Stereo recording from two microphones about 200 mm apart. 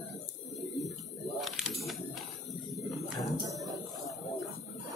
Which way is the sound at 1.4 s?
Centre (ahead or behind).